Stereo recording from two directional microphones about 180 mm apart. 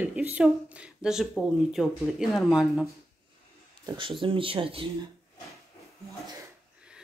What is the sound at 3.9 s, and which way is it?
Speech, 30° right (ahead or behind).